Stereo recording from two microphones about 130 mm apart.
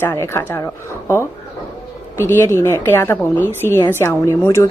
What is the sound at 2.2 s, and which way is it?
A woman's voice, 20° left (ahead or behind).